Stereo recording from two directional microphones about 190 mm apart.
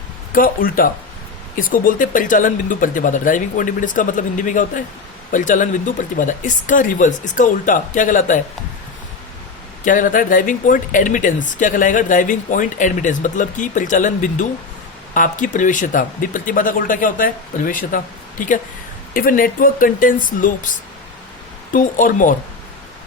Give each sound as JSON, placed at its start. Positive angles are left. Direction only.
{"t": 0.3, "sound": "speech", "side_deg": 50}
{"t": 9.8, "sound": "speech", "side_deg": 45}